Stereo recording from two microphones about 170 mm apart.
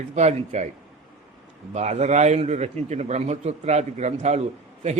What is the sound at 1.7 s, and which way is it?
A man's voice, 40° right (ahead or behind).